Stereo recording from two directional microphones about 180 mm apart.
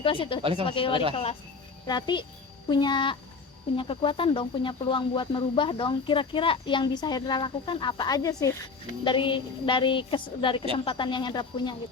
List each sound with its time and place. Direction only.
0.0 s speech: 30° left (ahead or behind)
0.4 s speech: 30° right (ahead or behind)
0.7 s speech: 30° left (ahead or behind)